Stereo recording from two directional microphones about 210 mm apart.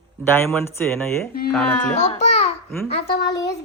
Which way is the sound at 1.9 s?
35° left (ahead or behind).